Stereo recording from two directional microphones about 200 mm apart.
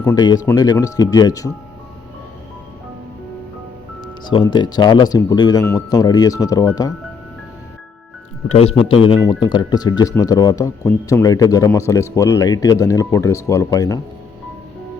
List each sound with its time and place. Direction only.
0.0 s speech: 15° left (ahead or behind)
4.3 s speech: 20° left (ahead or behind)
8.4 s speech: 30° left (ahead or behind)